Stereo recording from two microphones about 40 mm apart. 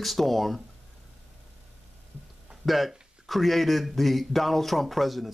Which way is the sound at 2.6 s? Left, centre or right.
Centre.